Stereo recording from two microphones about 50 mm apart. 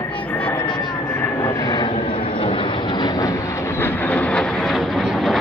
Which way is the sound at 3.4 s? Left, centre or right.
Left.